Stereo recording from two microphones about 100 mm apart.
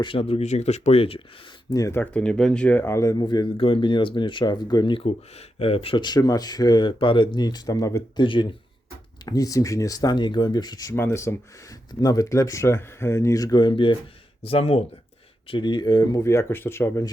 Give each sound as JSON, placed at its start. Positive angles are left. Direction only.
{"t": 0.0, "sound": "speech", "side_deg": 65}
{"t": 1.7, "sound": "speech", "side_deg": 35}
{"t": 2.0, "sound": "speech", "side_deg": 10}
{"t": 3.2, "sound": "speech", "side_deg": 45}
{"t": 3.6, "sound": "speech", "side_deg": 60}
{"t": 5.0, "sound": "speech", "side_deg": 80}
{"t": 6.0, "sound": "speech", "side_deg": 45}
{"t": 8.1, "sound": "speech", "side_deg": 50}
{"t": 9.2, "sound": "speech", "side_deg": 40}
{"t": 10.9, "sound": "speech", "side_deg": 25}
{"t": 11.9, "sound": "speech", "side_deg": 40}
{"t": 14.4, "sound": "speech", "side_deg": 75}
{"t": 15.4, "sound": "speech", "side_deg": 50}
{"t": 16.2, "sound": "speech", "side_deg": 30}